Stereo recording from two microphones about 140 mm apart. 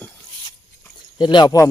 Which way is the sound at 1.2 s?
30° left (ahead or behind).